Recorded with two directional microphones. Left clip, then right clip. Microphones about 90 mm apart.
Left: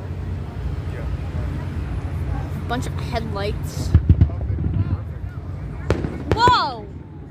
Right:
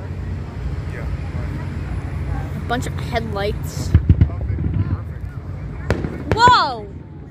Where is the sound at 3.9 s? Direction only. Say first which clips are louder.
Right 2 dB; 30° left (ahead or behind).